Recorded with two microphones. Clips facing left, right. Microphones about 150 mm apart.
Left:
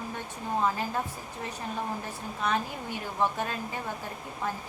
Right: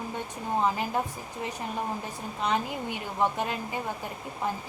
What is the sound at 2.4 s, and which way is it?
Speech, 15° right (ahead or behind).